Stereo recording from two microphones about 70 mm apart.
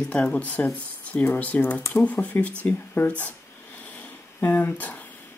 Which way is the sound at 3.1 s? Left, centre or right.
Left.